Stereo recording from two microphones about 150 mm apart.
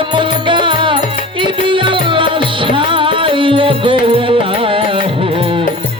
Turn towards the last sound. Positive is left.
turn(degrees=-35)  # may be behind; listen again after turning